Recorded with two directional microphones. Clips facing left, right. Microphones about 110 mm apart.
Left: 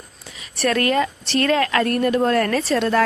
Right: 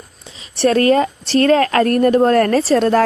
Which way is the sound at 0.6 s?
30° right (ahead or behind).